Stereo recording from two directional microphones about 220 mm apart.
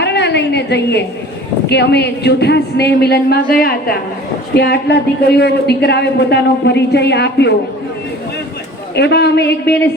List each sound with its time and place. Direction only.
0.0 s a woman's voice: 50° left (ahead or behind)
9.0 s a woman's voice: 50° left (ahead or behind)